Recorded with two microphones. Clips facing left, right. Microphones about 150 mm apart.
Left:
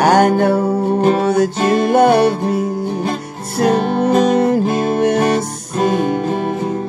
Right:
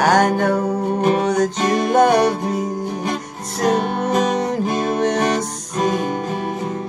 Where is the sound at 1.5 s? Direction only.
65° left (ahead or behind).